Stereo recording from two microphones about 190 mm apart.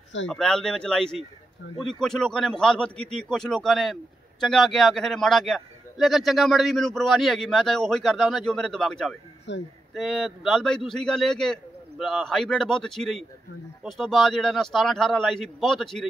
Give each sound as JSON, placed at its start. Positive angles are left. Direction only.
{"t": 0.3, "sound": "a man's voice", "side_deg": 5}
{"t": 9.5, "sound": "speech", "side_deg": 70}
{"t": 9.9, "sound": "a man's voice", "side_deg": 0}